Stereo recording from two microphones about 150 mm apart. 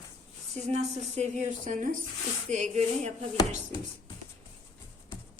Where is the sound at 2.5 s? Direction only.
50° right (ahead or behind).